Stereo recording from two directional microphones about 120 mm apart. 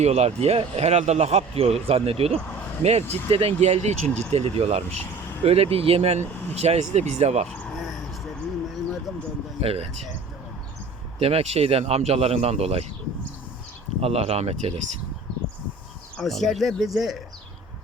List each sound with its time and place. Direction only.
0.0 s a man's voice: 60° right (ahead or behind)
4.0 s speech: 10° left (ahead or behind)
4.3 s a man's voice: 60° right (ahead or behind)
7.8 s a sound: centre (ahead or behind)
9.6 s a man's voice: 55° right (ahead or behind)
11.2 s a man's voice: 55° right (ahead or behind)
14.0 s a man's voice: 60° right (ahead or behind)
16.1 s speech: centre (ahead or behind)